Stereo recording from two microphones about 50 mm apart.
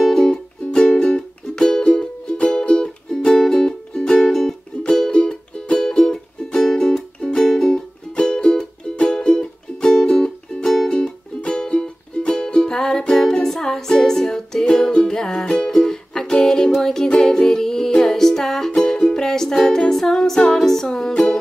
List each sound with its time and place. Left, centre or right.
0.0 s music: centre